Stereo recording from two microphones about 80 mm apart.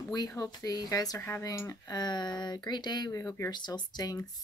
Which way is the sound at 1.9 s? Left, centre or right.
Left.